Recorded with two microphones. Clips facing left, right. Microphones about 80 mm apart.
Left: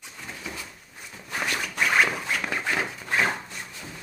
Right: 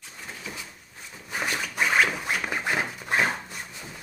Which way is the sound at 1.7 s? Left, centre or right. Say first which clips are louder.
Even; centre.